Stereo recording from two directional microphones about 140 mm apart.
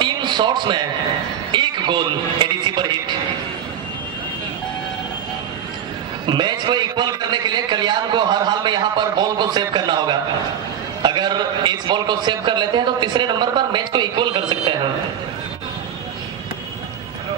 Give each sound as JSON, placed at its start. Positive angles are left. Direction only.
{"t": 0.0, "sound": "a sound", "side_deg": -35}
{"t": 1.5, "sound": "a man's voice", "side_deg": -35}
{"t": 6.2, "sound": "a man's voice", "side_deg": -35}